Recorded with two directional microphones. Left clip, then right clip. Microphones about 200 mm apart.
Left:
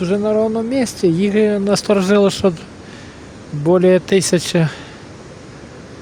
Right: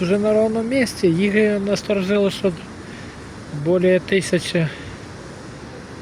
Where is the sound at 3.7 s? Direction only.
30° left (ahead or behind).